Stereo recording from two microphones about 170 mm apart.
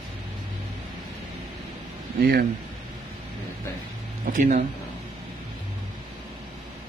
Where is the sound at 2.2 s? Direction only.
65° right (ahead or behind).